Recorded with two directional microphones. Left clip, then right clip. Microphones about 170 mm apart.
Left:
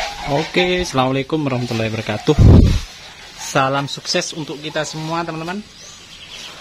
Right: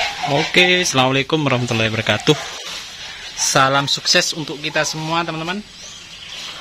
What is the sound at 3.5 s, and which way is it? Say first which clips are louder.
Speech: right 3 dB; centre (ahead or behind).